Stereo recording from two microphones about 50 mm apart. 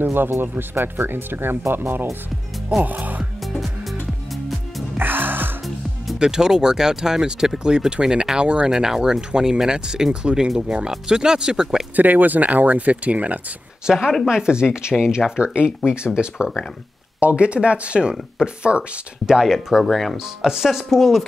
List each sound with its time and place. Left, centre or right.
0.0 s speech: right
4.9 s music: right
6.1 s speech: centre
11.9 s speech: right
13.8 s speech: centre
19.4 s speech: centre